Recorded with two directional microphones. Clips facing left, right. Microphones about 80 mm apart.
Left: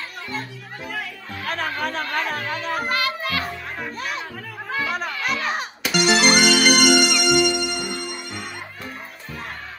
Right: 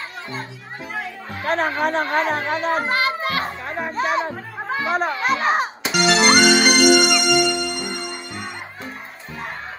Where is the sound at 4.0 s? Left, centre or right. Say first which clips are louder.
Right 8 dB; right.